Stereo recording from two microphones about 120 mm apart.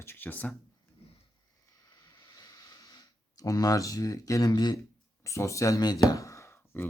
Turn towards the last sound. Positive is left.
turn(degrees=20)  # may be behind; listen again after turning